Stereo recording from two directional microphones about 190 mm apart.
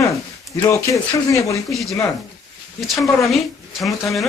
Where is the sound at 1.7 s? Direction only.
Centre (ahead or behind).